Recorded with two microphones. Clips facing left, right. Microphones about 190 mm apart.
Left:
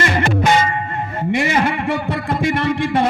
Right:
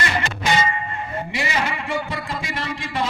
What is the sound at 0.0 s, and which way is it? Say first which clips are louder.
Music: left 7 dB; 50° left (ahead or behind).